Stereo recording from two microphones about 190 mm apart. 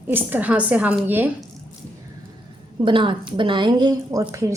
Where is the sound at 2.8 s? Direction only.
25° right (ahead or behind).